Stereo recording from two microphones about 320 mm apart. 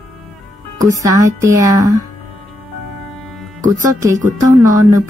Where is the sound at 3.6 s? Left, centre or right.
Right.